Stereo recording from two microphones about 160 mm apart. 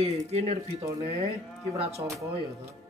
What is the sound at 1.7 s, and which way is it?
Speech, 40° right (ahead or behind).